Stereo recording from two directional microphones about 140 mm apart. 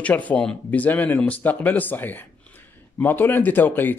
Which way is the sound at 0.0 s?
10° left (ahead or behind).